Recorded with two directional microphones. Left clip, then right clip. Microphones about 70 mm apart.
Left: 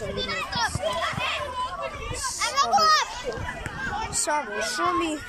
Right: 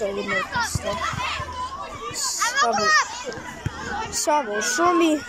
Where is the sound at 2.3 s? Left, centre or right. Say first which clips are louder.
Right 1 dB; left.